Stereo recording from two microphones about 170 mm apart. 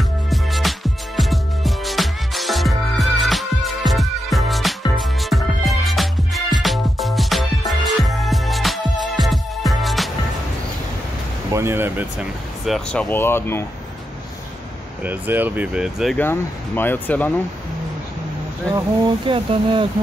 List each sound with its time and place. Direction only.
0.3 s music: centre (ahead or behind)
11.5 s speech: 15° right (ahead or behind); by 13.7 s 15° left (ahead or behind)
15.0 s speech: 10° right (ahead or behind)
16.2 s speech: 10° left (ahead or behind)
18.7 s speech: 20° right (ahead or behind)
19.2 s speech: 30° right (ahead or behind)